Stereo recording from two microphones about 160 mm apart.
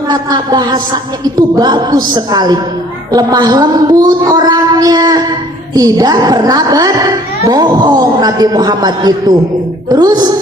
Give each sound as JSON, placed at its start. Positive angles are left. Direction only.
{"t": 0.1, "sound": "speech", "side_deg": -25}